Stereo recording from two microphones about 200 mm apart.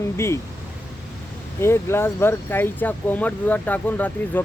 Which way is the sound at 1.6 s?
15° left (ahead or behind).